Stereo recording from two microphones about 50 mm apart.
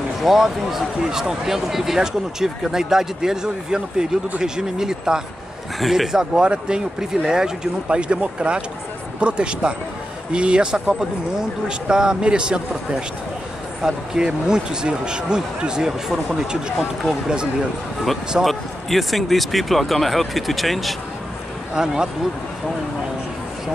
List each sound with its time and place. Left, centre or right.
0.2 s speech: centre
18.4 s speech: centre
21.7 s speech: centre